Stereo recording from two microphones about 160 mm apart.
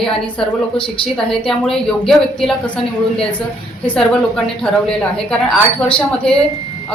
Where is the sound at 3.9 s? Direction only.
5° left (ahead or behind).